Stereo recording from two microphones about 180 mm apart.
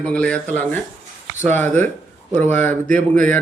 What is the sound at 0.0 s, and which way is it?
A man's voice, 5° left (ahead or behind).